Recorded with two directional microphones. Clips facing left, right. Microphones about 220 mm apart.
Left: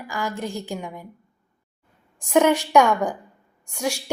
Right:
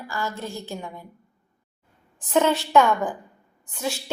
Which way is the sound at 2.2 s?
15° left (ahead or behind).